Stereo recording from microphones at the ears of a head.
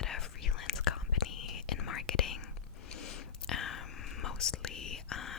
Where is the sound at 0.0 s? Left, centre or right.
Left.